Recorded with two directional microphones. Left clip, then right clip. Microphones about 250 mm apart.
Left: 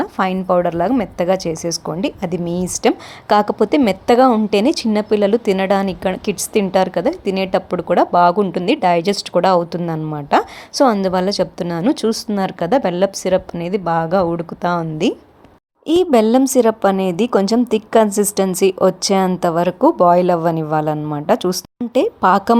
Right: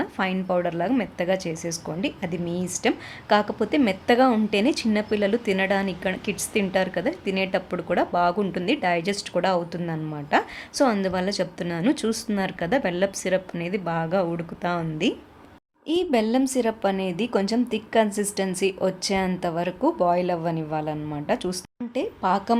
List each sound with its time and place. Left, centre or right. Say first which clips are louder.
0.0 s a woman's voice: left 8 dB; left